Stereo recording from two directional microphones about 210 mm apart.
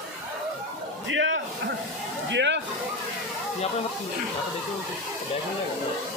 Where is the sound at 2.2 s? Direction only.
55° right (ahead or behind).